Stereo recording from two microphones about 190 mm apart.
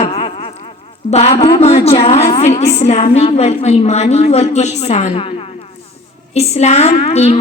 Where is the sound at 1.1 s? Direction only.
35° left (ahead or behind).